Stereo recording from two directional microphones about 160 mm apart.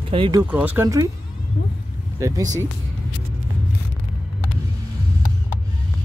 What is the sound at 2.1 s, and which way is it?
Speech, 20° right (ahead or behind).